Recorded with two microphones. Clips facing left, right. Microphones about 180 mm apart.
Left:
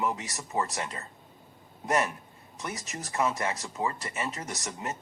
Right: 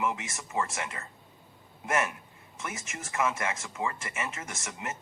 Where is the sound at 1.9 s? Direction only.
35° left (ahead or behind).